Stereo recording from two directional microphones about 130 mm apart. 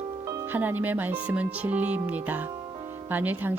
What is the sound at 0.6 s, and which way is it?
Speech, 15° right (ahead or behind).